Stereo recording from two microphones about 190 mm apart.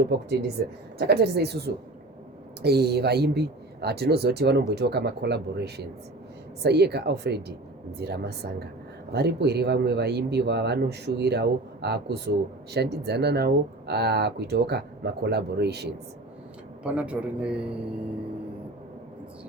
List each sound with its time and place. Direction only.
0.1 s speech: 55° right (ahead or behind)
16.8 s a man's voice: 5° right (ahead or behind)